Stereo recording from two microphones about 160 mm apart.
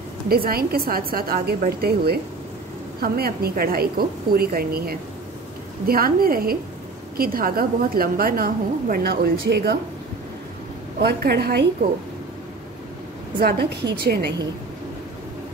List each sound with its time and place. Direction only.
0.3 s a woman's voice: 70° right (ahead or behind); by 9.8 s 85° right
11.0 s a woman's voice: 90° right
13.4 s a woman's voice: 75° right (ahead or behind)